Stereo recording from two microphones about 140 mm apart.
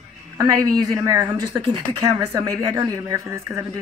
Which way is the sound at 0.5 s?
25° right (ahead or behind).